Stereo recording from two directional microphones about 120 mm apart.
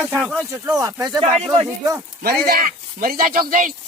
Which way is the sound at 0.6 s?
30° right (ahead or behind).